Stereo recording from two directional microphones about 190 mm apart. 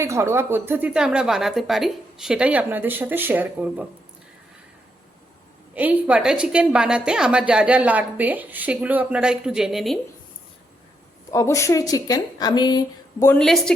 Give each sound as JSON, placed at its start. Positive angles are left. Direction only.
{"t": 0.0, "sound": "a woman's voice", "side_deg": -15}
{"t": 5.7, "sound": "a woman's voice", "side_deg": -10}
{"t": 11.3, "sound": "speech", "side_deg": 15}